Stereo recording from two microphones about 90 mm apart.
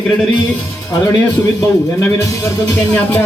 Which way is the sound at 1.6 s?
30° left (ahead or behind).